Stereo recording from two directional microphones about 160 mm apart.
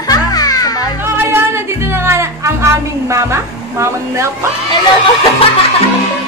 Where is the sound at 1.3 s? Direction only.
15° right (ahead or behind).